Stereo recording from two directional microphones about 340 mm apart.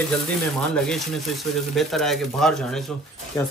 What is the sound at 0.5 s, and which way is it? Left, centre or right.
Speech, centre.